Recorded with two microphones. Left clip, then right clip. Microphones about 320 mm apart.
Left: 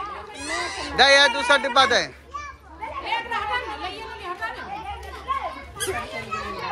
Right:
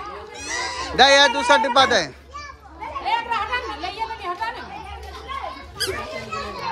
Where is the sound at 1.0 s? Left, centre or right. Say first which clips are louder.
Right 2 dB; centre.